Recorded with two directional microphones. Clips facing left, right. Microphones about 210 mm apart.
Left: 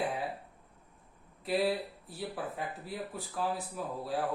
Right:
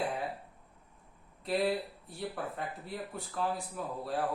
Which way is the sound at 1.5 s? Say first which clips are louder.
Even; centre (ahead or behind).